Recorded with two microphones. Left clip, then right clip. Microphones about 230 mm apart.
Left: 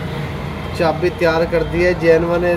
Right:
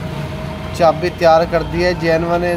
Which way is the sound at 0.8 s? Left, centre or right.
Right.